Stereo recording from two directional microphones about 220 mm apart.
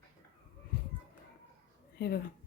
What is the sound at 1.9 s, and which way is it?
Speech, 45° left (ahead or behind).